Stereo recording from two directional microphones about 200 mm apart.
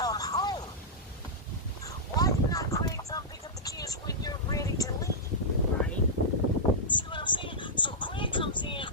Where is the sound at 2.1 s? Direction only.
15° left (ahead or behind).